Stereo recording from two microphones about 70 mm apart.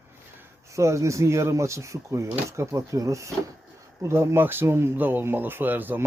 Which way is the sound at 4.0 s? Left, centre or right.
Right.